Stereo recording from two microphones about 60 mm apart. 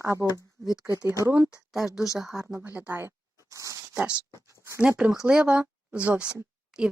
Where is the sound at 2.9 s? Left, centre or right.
Right.